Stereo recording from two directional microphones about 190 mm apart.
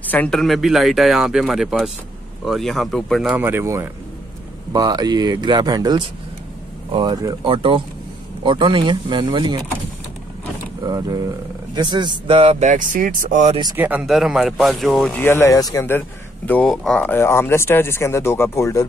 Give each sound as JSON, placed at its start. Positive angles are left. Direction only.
{"t": 0.0, "sound": "speech", "side_deg": 10}
{"t": 10.8, "sound": "speech", "side_deg": -20}
{"t": 13.7, "sound": "speech", "side_deg": -10}
{"t": 15.2, "sound": "speech", "side_deg": 15}